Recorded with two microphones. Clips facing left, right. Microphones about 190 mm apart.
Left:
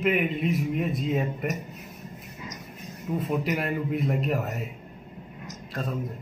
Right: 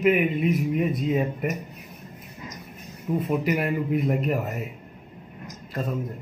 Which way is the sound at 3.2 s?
5° right (ahead or behind).